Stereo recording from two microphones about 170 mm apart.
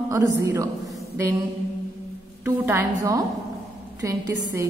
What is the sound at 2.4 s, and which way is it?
A woman's voice, 10° right (ahead or behind).